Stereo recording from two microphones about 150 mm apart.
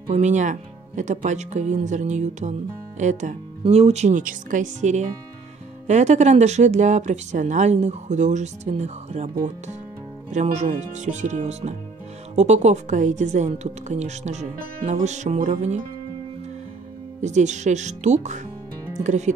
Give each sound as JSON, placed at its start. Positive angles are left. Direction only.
{"t": 0.1, "sound": "speech", "side_deg": -50}
{"t": 10.3, "sound": "speech", "side_deg": -50}
{"t": 17.2, "sound": "speech", "side_deg": -50}